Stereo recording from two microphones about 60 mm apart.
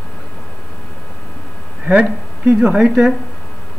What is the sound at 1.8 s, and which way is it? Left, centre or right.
Speech, centre.